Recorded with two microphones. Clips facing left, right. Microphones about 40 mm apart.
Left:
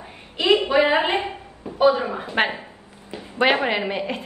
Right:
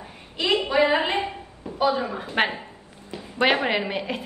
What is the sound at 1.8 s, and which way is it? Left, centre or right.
Speech, left.